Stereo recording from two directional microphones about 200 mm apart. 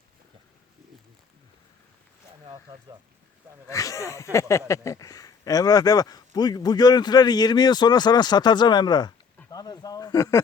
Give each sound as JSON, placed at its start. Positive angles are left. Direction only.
{"t": 2.7, "sound": "speech", "side_deg": -15}
{"t": 3.7, "sound": "speech", "side_deg": 15}